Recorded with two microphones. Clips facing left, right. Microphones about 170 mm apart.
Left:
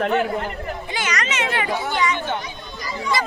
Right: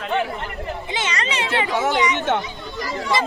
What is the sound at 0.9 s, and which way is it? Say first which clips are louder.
Speech: even; 25° right (ahead or behind).